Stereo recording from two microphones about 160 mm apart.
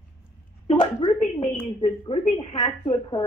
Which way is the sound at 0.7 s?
30° left (ahead or behind).